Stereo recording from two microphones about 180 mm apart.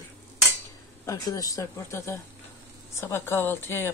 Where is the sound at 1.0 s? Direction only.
20° left (ahead or behind).